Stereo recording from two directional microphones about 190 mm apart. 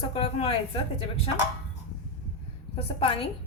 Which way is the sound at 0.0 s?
30° left (ahead or behind).